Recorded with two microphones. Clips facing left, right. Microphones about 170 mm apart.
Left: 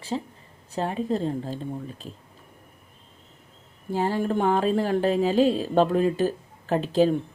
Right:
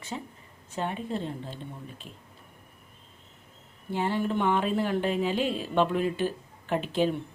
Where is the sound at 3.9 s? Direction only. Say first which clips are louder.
Left 3 dB; 40° left (ahead or behind).